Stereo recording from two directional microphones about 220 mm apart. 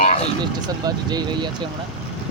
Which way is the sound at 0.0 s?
35° left (ahead or behind).